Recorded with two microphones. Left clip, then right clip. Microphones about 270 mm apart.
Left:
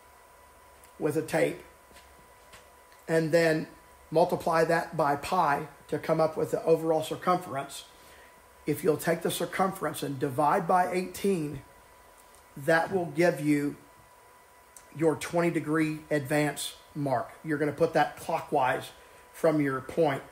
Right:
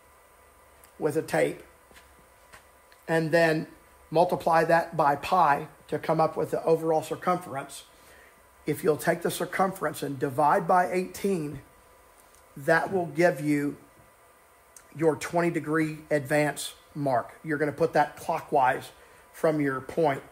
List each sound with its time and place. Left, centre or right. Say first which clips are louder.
1.0 s speech: right 2 dB; centre
3.1 s speech: right 1 dB; centre
8.6 s speech: right 2 dB; centre
12.6 s speech: right 1 dB; centre
15.0 s speech: right 2 dB; centre